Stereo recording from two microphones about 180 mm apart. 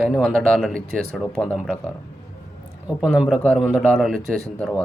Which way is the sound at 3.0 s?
5° right (ahead or behind).